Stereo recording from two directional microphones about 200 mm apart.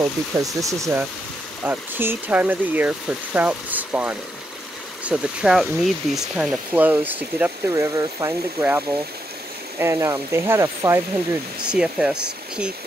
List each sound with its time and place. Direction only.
0.4 s speech: 15° right (ahead or behind)